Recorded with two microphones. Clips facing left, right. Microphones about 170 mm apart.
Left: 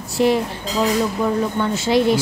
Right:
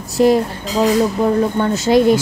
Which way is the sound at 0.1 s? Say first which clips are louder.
Right 4 dB; 40° right (ahead or behind).